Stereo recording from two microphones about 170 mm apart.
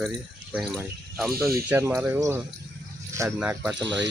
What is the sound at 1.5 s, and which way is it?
Speech, 15° right (ahead or behind).